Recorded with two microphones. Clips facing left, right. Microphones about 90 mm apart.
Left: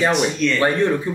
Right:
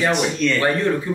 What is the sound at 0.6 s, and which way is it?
Speech, 20° left (ahead or behind).